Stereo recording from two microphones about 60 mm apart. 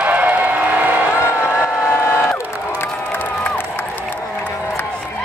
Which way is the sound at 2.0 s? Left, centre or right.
Left.